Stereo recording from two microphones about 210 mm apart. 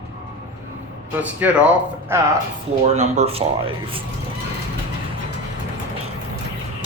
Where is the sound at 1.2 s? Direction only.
5° right (ahead or behind).